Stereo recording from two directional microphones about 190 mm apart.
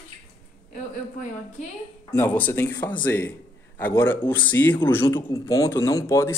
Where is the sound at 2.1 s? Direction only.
10° left (ahead or behind).